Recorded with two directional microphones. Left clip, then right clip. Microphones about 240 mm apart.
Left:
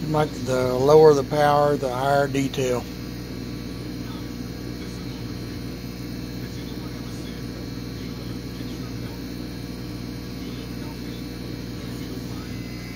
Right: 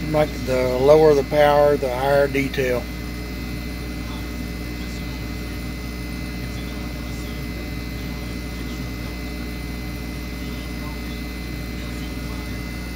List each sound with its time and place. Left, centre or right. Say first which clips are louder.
0.1 s speech: right 3 dB; centre